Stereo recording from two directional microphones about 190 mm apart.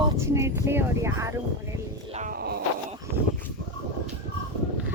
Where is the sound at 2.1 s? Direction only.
45° right (ahead or behind).